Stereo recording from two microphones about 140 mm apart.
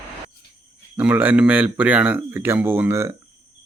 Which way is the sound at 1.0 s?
10° right (ahead or behind).